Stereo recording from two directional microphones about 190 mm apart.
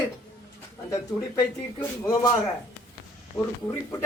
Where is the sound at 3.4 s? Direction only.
15° left (ahead or behind).